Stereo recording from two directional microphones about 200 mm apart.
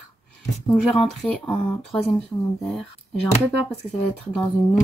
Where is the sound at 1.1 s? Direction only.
Centre (ahead or behind).